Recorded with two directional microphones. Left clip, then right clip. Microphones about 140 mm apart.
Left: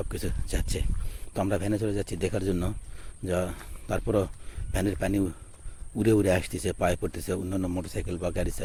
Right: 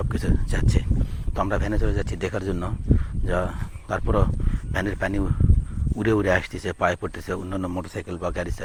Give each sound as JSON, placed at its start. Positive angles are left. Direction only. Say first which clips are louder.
{"t": 0.0, "sound": "speech", "louder": "right 6 dB", "side_deg": 30}
{"t": 1.4, "sound": "speech", "louder": "right 3 dB", "side_deg": 35}
{"t": 4.7, "sound": "speech", "louder": "right 2 dB", "side_deg": 40}
{"t": 7.5, "sound": "a man's voice", "louder": "right 3 dB", "side_deg": 20}
{"t": 8.3, "sound": "speech", "louder": "right 2 dB", "side_deg": 35}